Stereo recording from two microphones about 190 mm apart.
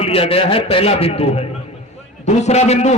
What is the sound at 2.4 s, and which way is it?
Speech, 35° left (ahead or behind).